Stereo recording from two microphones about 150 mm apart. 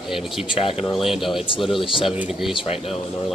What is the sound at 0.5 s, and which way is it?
Speech, 40° left (ahead or behind).